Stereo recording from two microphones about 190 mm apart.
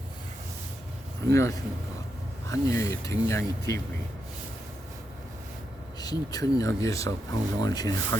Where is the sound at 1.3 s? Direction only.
15° left (ahead or behind).